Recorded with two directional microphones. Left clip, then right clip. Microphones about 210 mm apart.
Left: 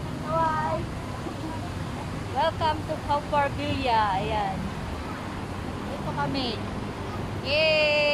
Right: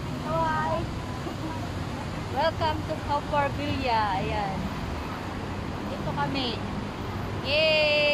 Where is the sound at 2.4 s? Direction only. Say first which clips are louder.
Left 1 dB; 15° left (ahead or behind).